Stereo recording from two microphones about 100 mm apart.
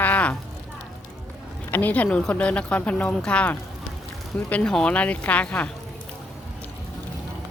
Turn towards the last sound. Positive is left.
turn(degrees=15)  # may be behind; listen again after turning